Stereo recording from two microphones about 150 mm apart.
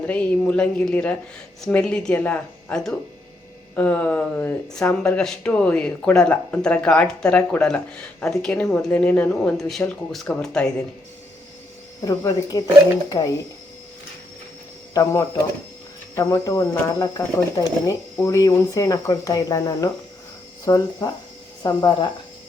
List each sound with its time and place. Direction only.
0.1 s speech: 10° left (ahead or behind)
12.0 s speech: 25° left (ahead or behind)
14.9 s speech: 20° left (ahead or behind)